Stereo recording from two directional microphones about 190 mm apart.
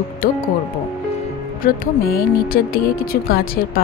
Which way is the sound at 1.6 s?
50° left (ahead or behind).